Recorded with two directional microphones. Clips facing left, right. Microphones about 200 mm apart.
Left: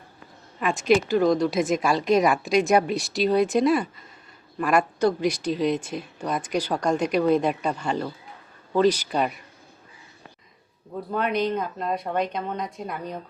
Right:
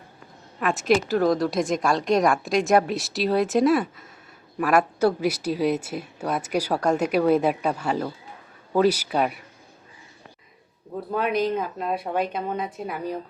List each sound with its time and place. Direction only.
0.6 s a woman's voice: centre (ahead or behind)
11.1 s a woman's voice: 5° right (ahead or behind)